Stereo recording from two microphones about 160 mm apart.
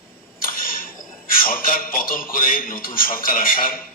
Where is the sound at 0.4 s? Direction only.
60° left (ahead or behind).